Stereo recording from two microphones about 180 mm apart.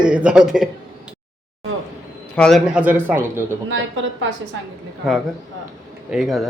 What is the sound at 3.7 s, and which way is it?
Speech, 90° right.